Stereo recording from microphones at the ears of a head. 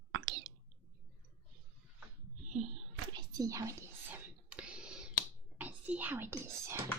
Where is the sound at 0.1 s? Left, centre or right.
Right.